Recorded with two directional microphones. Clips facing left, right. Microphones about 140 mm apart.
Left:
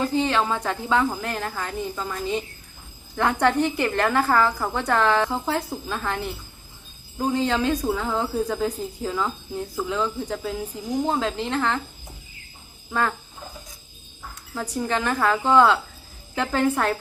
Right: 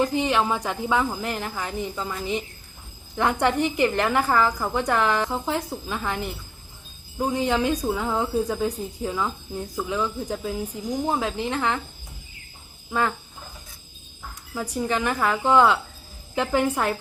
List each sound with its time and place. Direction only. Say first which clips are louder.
0.0 s a woman's voice: even; 15° right (ahead or behind)
14.5 s a woman's voice: even; 10° right (ahead or behind)